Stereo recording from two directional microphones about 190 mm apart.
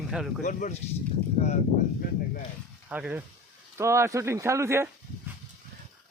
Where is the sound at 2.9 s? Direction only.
5° right (ahead or behind).